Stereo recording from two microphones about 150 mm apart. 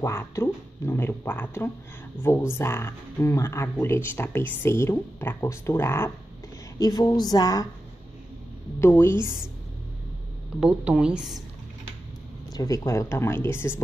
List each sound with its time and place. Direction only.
0.0 s a woman's voice: 15° left (ahead or behind)
8.8 s speech: 15° left (ahead or behind)
10.6 s a woman's voice: 10° right (ahead or behind)
12.5 s speech: 20° left (ahead or behind)